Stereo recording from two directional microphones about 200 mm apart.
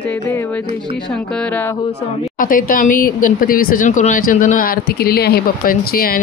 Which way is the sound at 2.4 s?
45° left (ahead or behind).